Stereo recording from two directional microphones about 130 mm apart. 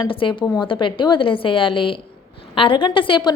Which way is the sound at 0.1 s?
40° left (ahead or behind).